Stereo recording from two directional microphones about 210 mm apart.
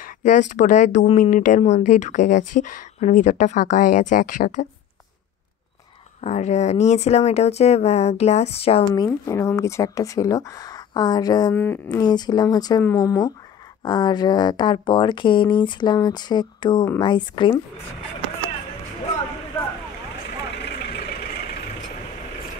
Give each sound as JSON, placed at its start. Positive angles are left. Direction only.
{"t": 0.0, "sound": "speech", "side_deg": 35}
{"t": 6.2, "sound": "speech", "side_deg": 35}
{"t": 9.0, "sound": "speech", "side_deg": 15}
{"t": 20.5, "sound": "vehicle", "side_deg": 50}